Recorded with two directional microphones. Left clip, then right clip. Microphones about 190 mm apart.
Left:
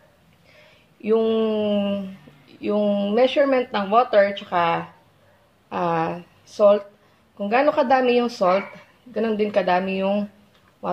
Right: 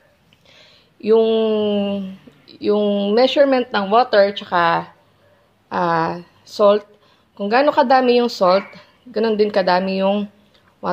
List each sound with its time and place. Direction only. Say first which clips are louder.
1.0 s a woman's voice: right 5 dB; 40° right (ahead or behind)